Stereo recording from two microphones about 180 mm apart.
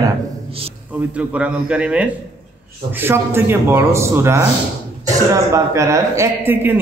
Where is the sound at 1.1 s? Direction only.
5° right (ahead or behind).